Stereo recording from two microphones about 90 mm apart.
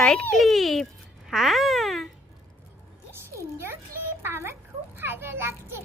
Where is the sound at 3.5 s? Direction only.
30° right (ahead or behind).